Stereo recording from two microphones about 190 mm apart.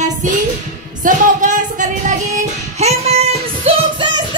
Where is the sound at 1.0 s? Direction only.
40° right (ahead or behind).